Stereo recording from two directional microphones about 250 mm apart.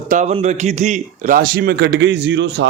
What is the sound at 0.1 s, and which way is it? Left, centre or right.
A man's voice, right.